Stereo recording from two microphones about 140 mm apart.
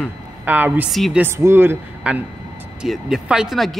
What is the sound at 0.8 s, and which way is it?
Speech, centre (ahead or behind).